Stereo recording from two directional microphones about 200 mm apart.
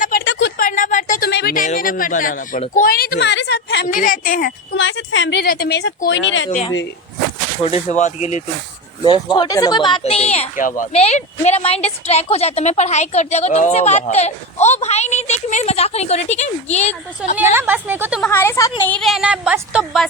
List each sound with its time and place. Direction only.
0.3 s a sound: 65° left (ahead or behind)
0.5 s a sound: 45° left (ahead or behind)
1.3 s speech: 55° left (ahead or behind)
3.8 s speech: 45° left (ahead or behind)
4.8 s speech: 70° left (ahead or behind)
7.6 s speech: 35° left (ahead or behind)
9.0 s speech: 25° left (ahead or behind)
17.5 s a woman's voice: 10° right (ahead or behind)
18.2 s a woman's voice: 10° left (ahead or behind)
18.9 s a woman's voice: centre (ahead or behind)